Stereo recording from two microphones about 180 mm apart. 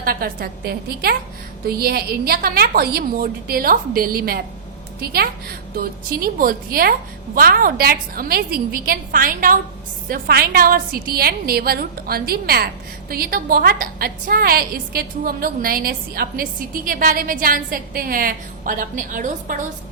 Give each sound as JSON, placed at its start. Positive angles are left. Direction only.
{"t": 0.0, "sound": "a woman's voice", "side_deg": -55}